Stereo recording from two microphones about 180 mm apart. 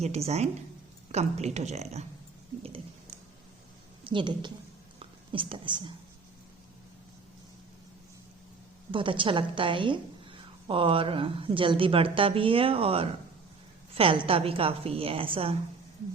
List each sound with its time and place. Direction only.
0.0 s a woman's voice: 35° right (ahead or behind)
4.0 s a woman's voice: 25° right (ahead or behind)
4.9 s whispering: 30° right (ahead or behind)
8.9 s a woman's voice: 30° right (ahead or behind)